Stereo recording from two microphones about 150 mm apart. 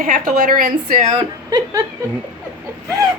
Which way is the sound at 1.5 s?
25° right (ahead or behind).